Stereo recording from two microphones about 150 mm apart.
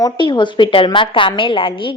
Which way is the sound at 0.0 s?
30° left (ahead or behind).